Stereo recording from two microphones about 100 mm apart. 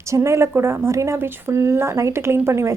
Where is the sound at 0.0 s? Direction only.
30° right (ahead or behind).